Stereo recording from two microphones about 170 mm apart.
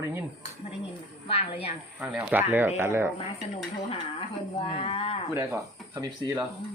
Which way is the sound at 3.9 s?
35° left (ahead or behind).